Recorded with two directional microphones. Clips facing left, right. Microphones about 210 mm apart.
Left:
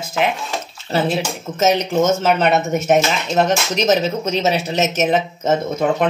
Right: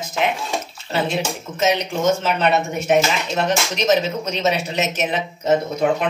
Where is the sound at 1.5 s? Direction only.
40° left (ahead or behind).